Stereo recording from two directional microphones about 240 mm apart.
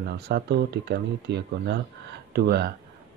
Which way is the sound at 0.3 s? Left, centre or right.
Right.